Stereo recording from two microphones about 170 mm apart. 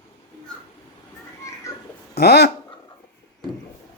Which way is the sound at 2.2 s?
80° left.